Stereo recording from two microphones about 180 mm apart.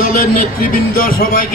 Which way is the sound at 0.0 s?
55° left (ahead or behind).